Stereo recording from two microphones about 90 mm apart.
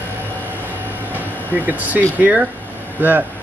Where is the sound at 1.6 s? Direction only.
20° right (ahead or behind).